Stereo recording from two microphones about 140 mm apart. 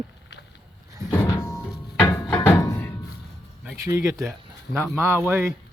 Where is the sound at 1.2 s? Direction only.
20° left (ahead or behind).